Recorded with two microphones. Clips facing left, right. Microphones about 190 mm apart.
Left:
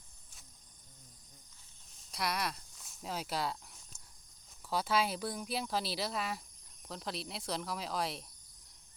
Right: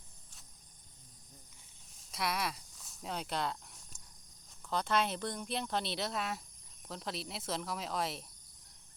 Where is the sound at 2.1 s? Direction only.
Centre (ahead or behind).